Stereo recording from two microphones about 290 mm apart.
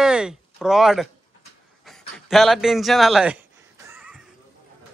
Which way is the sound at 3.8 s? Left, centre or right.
Centre.